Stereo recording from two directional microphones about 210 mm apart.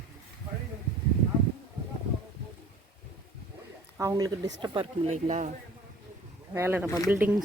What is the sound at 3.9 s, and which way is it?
Speech, 15° right (ahead or behind).